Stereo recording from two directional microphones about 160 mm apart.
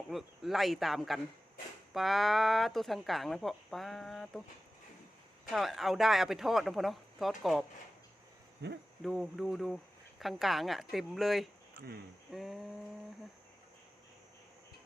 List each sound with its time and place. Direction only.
0.1 s speech: centre (ahead or behind)
5.5 s speech: centre (ahead or behind)
8.6 s cricket: 90° right
9.0 s speech: centre (ahead or behind)